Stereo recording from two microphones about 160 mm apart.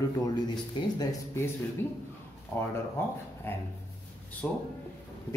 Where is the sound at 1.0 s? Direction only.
15° left (ahead or behind).